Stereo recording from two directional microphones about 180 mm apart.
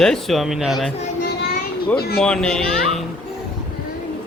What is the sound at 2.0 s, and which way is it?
Speech, 60° left (ahead or behind).